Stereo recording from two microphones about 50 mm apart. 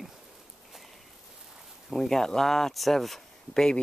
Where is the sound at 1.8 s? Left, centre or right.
Centre.